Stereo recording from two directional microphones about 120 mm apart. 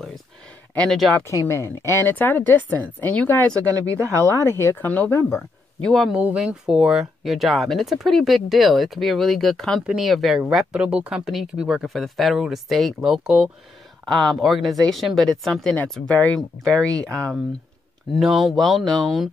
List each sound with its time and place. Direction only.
0.7 s speech: 5° left (ahead or behind)
1.2 s speech: 25° left (ahead or behind)
3.9 s speech: 25° right (ahead or behind)
4.4 s speech: 20° left (ahead or behind)
5.8 s speech: 5° left (ahead or behind)
6.1 s speech: 10° right (ahead or behind); by 17.2 s 5° left (ahead or behind)
18.2 s speech: centre (ahead or behind)